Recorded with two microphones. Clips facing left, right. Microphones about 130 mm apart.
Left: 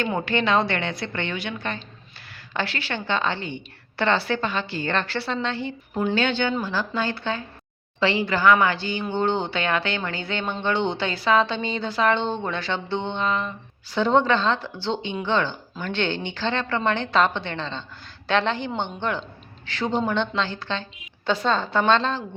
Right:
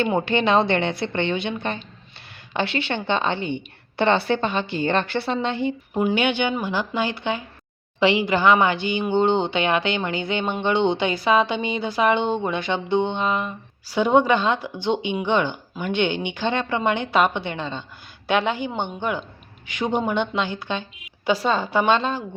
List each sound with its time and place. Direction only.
0.0 s a woman's voice: 20° right (ahead or behind)